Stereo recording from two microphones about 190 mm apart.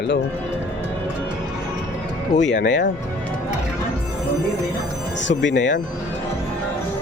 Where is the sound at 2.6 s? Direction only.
75° left (ahead or behind).